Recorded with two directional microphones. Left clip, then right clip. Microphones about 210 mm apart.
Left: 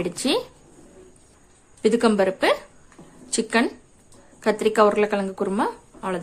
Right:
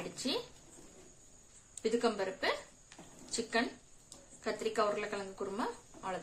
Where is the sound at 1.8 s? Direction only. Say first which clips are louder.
Left 14 dB; 45° left (ahead or behind).